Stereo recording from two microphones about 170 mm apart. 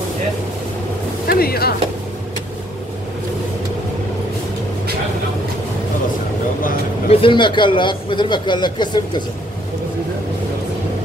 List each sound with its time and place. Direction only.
1.2 s speech: 65° left (ahead or behind)
7.1 s speech: 30° left (ahead or behind)